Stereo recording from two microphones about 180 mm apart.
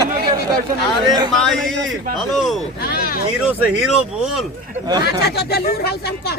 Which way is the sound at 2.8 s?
55° left (ahead or behind).